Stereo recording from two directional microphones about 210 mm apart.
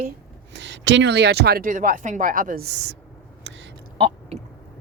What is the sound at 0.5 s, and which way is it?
Speech, 55° right (ahead or behind).